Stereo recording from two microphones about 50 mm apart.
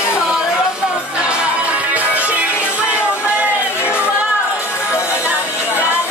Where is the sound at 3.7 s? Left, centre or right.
Left.